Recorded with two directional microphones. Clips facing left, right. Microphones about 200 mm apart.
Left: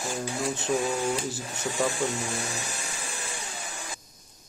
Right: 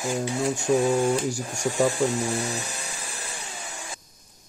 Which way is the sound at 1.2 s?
15° right (ahead or behind).